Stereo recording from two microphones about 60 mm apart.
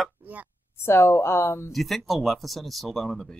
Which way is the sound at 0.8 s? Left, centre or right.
Left.